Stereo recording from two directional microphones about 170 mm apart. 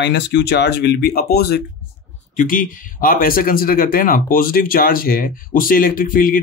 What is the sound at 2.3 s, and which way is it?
Speech, 55° left (ahead or behind).